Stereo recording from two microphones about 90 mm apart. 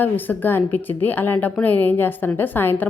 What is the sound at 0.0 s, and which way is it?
A woman's voice, 20° left (ahead or behind).